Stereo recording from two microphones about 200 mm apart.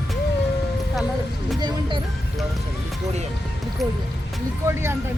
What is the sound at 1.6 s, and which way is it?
Speech, 25° right (ahead or behind).